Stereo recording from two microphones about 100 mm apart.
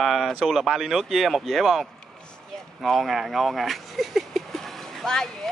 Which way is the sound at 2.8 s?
Centre (ahead or behind).